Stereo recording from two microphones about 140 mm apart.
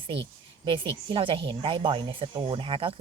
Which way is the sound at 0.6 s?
40° right (ahead or behind).